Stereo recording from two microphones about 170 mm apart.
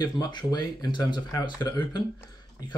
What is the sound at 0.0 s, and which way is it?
Speech, 25° left (ahead or behind).